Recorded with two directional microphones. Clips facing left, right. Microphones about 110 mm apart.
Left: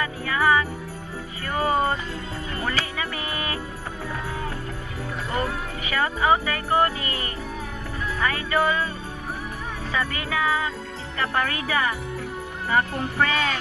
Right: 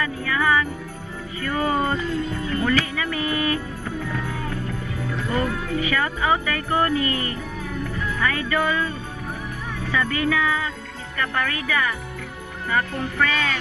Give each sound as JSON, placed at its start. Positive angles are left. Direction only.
{"t": 0.0, "sound": "jingle bell", "side_deg": 25}
{"t": 1.4, "sound": "speech", "side_deg": 25}
{"t": 4.1, "sound": "music", "side_deg": 30}
{"t": 5.1, "sound": "jingle bell", "side_deg": 25}
{"t": 7.9, "sound": "speech", "side_deg": 25}
{"t": 9.9, "sound": "jingle bell", "side_deg": 25}